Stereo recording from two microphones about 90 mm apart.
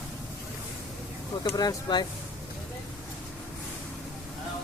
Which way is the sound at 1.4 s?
45° left (ahead or behind).